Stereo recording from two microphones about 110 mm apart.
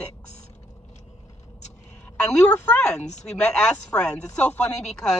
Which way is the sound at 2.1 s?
10° left (ahead or behind).